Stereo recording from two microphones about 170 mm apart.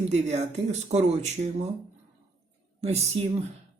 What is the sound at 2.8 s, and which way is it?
Speech, 40° right (ahead or behind).